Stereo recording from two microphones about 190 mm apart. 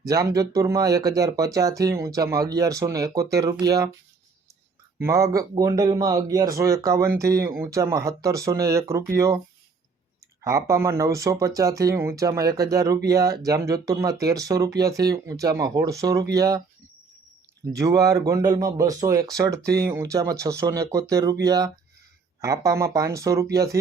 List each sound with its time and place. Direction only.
0.1 s speech: 20° right (ahead or behind)
4.9 s speech: 15° right (ahead or behind)
10.4 s speech: 15° right (ahead or behind)
17.7 s speech: 20° right (ahead or behind)